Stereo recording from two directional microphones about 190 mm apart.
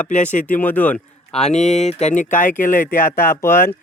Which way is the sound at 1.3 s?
35° left (ahead or behind).